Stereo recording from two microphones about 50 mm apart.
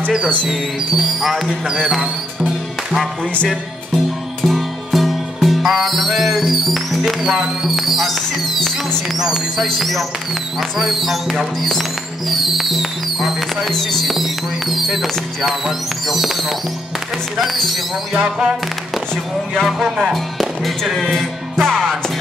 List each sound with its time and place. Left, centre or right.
0.5 s speech: centre
3.4 s music: centre
7.6 s speech: centre
9.2 s speech: centre
9.8 s speech: centre
18.1 s speech: centre
19.6 s speech: centre
21.6 s music: centre